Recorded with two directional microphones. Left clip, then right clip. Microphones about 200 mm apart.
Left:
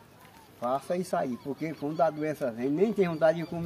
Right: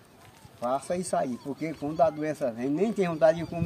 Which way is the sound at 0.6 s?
20° right (ahead or behind).